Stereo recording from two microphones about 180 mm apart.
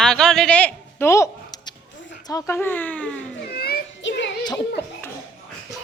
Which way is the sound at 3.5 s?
60° left (ahead or behind).